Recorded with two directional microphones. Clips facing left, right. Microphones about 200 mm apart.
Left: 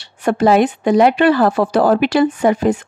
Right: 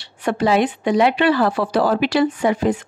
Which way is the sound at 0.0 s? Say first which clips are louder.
Left 5 dB; 45° left (ahead or behind).